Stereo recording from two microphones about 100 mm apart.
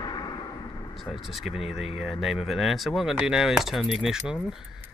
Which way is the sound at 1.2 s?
Centre (ahead or behind).